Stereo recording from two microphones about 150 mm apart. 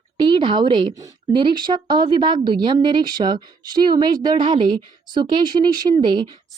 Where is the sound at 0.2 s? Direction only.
30° right (ahead or behind).